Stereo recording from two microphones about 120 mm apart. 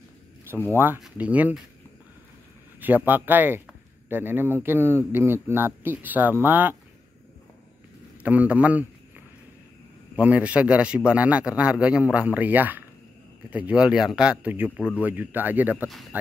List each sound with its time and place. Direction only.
0.7 s a man's voice: 15° right (ahead or behind)
2.8 s a man's voice: 15° right (ahead or behind)
8.2 s a man's voice: 10° right (ahead or behind)
10.1 s a man's voice: 10° right (ahead or behind)